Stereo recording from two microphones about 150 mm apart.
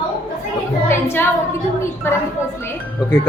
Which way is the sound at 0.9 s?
15° left (ahead or behind).